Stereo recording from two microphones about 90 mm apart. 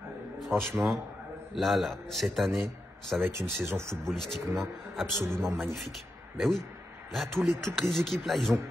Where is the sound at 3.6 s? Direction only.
30° right (ahead or behind).